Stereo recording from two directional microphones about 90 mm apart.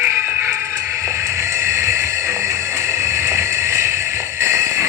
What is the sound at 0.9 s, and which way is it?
Music, 35° right (ahead or behind).